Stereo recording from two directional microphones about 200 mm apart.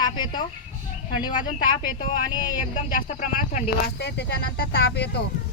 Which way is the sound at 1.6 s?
25° left (ahead or behind).